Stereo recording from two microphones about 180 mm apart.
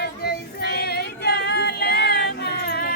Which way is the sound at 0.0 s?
65° left (ahead or behind).